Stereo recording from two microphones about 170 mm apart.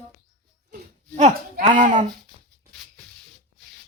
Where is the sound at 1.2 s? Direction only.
45° right (ahead or behind).